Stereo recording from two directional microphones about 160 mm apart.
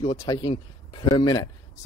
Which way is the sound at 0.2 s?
25° left (ahead or behind).